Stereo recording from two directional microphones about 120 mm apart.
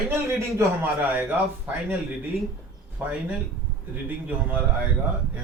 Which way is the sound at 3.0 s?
10° right (ahead or behind).